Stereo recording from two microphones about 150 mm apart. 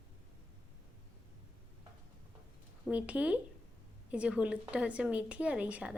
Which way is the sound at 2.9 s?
10° right (ahead or behind).